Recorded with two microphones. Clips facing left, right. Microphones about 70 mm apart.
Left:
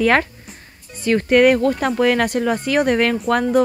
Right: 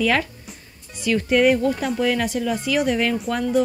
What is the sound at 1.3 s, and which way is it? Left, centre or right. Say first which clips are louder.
A woman's voice: left 4 dB; left.